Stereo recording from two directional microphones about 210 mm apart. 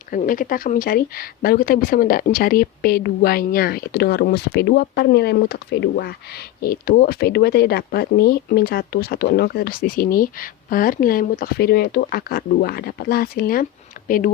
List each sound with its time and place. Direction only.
0.1 s speech: 40° left (ahead or behind)